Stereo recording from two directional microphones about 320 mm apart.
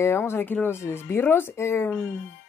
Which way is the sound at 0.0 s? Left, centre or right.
Centre.